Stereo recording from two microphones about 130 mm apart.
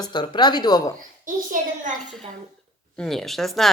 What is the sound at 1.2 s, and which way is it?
Speech, 90° right.